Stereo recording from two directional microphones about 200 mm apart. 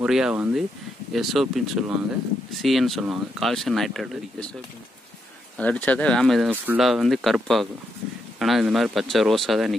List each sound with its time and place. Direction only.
0.0 s speech: 5° right (ahead or behind)
5.6 s speech: 5° left (ahead or behind)